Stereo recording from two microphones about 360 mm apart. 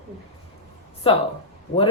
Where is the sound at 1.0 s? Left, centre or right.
Centre.